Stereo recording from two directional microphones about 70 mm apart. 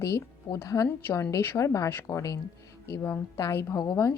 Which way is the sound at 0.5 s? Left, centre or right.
Left.